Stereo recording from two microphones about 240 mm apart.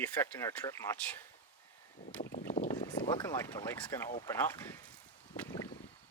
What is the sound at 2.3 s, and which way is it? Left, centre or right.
Boat, left.